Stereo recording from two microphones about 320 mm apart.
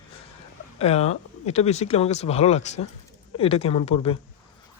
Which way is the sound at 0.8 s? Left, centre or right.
Centre.